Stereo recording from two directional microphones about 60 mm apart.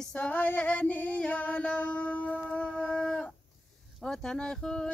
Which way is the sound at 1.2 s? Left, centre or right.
Left.